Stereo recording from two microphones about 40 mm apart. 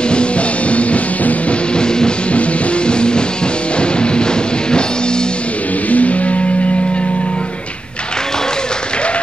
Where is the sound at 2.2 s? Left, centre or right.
Left.